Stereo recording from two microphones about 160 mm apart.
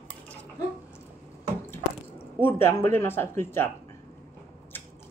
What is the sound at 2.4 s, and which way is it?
Speech, 15° left (ahead or behind).